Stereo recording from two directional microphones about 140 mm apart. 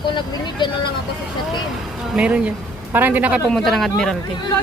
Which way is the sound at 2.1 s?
5° right (ahead or behind).